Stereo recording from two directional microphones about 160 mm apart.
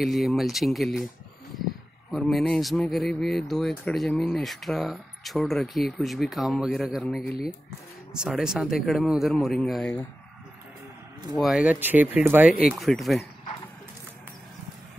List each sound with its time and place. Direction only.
0.0 s speech: centre (ahead or behind)
2.1 s speech: centre (ahead or behind)
11.3 s speech: 5° right (ahead or behind)